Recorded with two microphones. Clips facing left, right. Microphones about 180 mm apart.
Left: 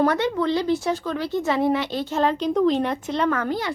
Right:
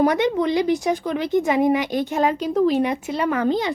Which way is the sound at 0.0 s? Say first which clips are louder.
Right 2 dB; 15° right (ahead or behind).